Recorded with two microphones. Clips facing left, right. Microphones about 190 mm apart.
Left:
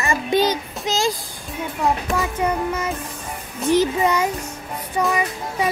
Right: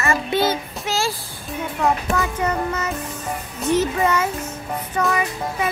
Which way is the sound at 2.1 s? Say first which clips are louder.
Even; 10° left (ahead or behind).